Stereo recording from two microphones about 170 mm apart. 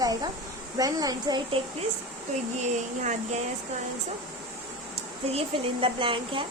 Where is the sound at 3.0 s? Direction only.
45° right (ahead or behind).